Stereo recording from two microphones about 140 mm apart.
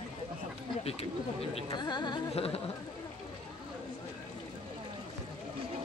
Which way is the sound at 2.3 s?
45° left (ahead or behind).